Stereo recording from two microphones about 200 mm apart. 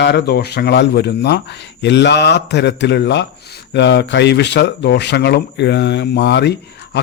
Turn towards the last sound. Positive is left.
turn(degrees=60)  # may be behind; listen again after turning